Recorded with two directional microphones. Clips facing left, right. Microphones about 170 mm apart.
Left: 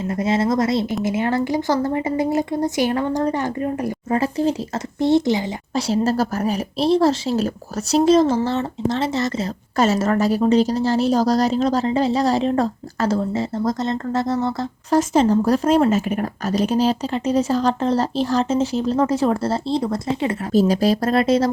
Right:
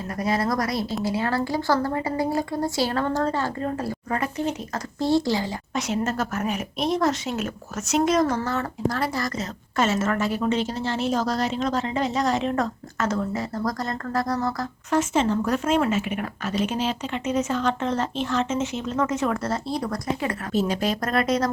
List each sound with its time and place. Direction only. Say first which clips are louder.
0.1 s speech: left 4 dB; 25° left (ahead or behind)
4.2 s a woman's voice: left 8 dB; 30° left (ahead or behind)
4.9 s speech: left 5 dB; 20° left (ahead or behind)
5.7 s a woman's voice: left 7 dB; 35° left (ahead or behind)
9.7 s a woman's voice: left 5 dB; 35° left (ahead or behind)
20.5 s a woman's voice: left 8 dB; 35° left (ahead or behind)